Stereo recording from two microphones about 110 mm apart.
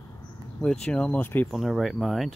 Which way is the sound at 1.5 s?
Centre (ahead or behind).